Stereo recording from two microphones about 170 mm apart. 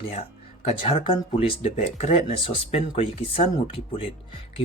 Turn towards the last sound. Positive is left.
turn(degrees=35)  # may be behind; listen again after turning